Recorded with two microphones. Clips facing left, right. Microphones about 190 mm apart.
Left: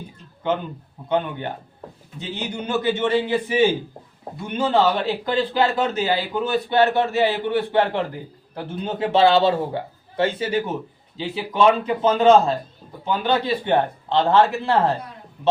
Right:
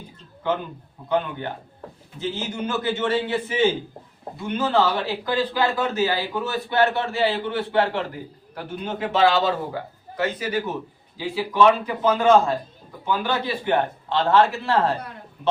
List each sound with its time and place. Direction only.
1.0 s a man's voice: 20° left (ahead or behind)